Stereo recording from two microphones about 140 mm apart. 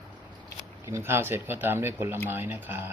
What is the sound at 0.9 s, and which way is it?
Speech, 20° right (ahead or behind).